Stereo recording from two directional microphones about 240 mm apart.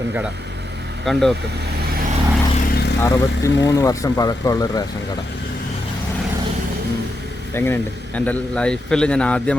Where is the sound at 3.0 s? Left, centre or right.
Centre.